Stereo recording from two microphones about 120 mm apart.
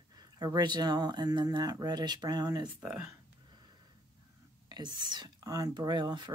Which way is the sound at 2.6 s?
10° right (ahead or behind).